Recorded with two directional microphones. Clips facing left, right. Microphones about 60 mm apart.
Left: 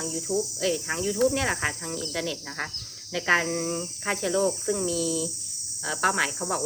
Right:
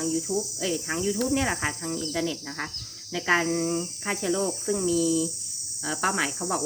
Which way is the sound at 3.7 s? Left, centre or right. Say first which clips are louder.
Right 2 dB; centre.